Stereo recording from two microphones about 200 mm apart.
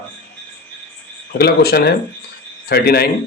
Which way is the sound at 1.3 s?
50° left (ahead or behind).